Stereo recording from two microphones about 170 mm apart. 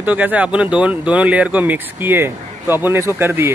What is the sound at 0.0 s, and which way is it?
Speech, 10° right (ahead or behind).